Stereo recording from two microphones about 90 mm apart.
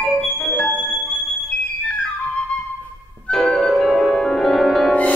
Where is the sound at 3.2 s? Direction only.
5° left (ahead or behind).